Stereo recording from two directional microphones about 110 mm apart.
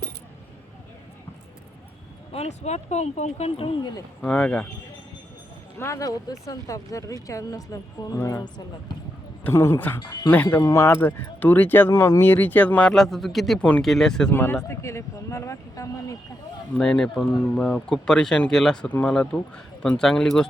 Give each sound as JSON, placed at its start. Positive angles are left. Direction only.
{"t": 2.3, "sound": "speech", "side_deg": 80}
{"t": 4.2, "sound": "speech", "side_deg": 10}
{"t": 5.8, "sound": "speech", "side_deg": 30}
{"t": 9.4, "sound": "speech", "side_deg": 25}
{"t": 12.9, "sound": "speech", "side_deg": 0}
{"t": 14.3, "sound": "speech", "side_deg": 20}
{"t": 16.7, "sound": "speech", "side_deg": 10}